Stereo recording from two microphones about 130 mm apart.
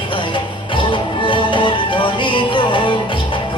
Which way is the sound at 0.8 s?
40° left (ahead or behind).